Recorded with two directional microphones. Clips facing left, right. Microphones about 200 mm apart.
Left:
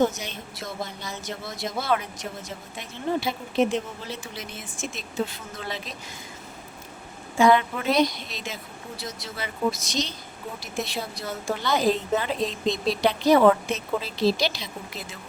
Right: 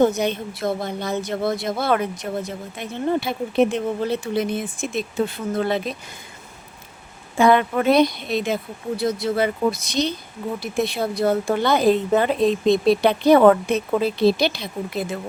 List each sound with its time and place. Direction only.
0.0 s a woman's voice: 60° right (ahead or behind)
7.3 s a woman's voice: 55° right (ahead or behind)